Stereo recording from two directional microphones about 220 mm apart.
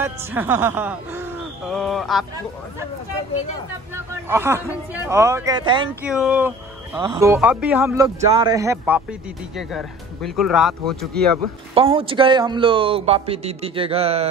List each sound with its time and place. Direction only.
0.0 s a man's voice: 10° right (ahead or behind)
1.7 s speech: centre (ahead or behind)
4.3 s a man's voice: 10° right (ahead or behind)
6.0 s speech: 5° right (ahead or behind)
7.0 s a man's voice: 15° right (ahead or behind)
9.6 s speech: centre (ahead or behind)
11.7 s speech: 25° right (ahead or behind)